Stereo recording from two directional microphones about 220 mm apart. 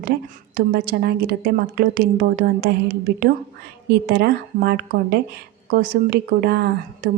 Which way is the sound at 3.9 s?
45° right (ahead or behind).